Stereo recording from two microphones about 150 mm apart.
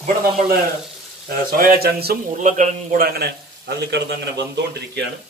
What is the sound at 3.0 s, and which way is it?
A man's voice, 90° right.